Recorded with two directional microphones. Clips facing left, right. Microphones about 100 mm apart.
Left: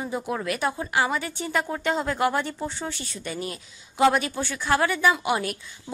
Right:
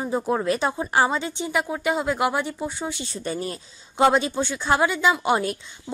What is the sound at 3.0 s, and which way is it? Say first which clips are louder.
A woman's voice: right 4 dB; 35° right (ahead or behind).